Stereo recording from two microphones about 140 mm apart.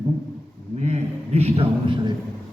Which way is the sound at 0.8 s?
50° right (ahead or behind).